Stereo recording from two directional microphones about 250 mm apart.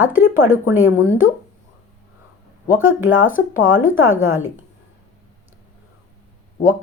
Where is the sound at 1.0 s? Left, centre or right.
Left.